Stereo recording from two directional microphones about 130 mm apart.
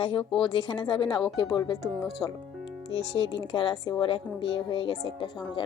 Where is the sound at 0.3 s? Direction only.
35° left (ahead or behind).